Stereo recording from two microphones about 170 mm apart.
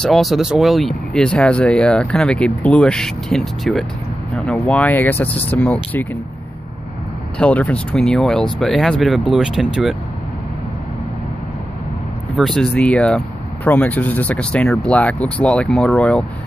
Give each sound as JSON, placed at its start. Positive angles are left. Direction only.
{"t": 0.0, "sound": "speech", "side_deg": 0}
{"t": 7.3, "sound": "speech", "side_deg": 10}
{"t": 12.4, "sound": "speech", "side_deg": 5}